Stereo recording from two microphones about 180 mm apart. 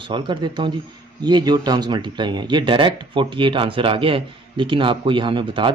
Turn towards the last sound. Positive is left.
turn(degrees=-25)  # may be behind; listen again after turning